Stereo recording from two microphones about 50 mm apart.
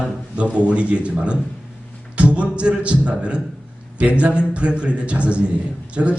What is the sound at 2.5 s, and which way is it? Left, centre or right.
A man's voice, right.